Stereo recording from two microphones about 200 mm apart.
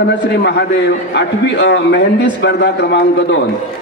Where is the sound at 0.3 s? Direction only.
60° left (ahead or behind).